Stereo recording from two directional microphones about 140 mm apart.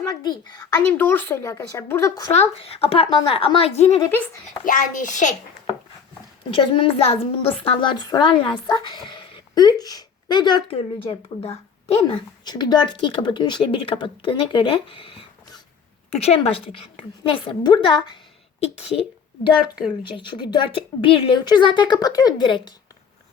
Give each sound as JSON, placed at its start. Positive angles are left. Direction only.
{"t": 0.0, "sound": "a child's voice", "side_deg": 25}
{"t": 0.8, "sound": "a woman's voice", "side_deg": 15}
{"t": 2.3, "sound": "speech", "side_deg": 45}
{"t": 4.6, "sound": "a child's voice", "side_deg": 70}
{"t": 6.5, "sound": "a woman's voice", "side_deg": 40}
{"t": 18.6, "sound": "speech", "side_deg": 50}
{"t": 20.0, "sound": "a woman's voice", "side_deg": 35}